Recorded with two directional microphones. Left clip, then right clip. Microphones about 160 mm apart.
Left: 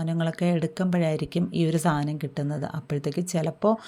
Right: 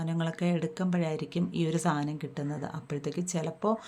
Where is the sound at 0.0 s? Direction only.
30° left (ahead or behind).